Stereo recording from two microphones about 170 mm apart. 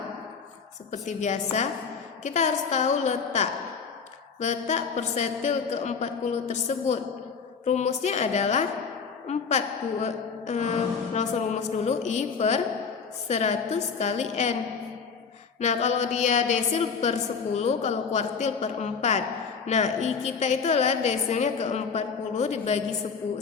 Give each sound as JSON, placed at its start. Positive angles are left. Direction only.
{"t": 0.9, "sound": "a woman's voice", "side_deg": 45}
{"t": 15.6, "sound": "a woman's voice", "side_deg": 40}